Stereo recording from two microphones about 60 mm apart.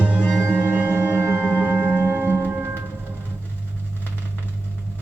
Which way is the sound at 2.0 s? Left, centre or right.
Right.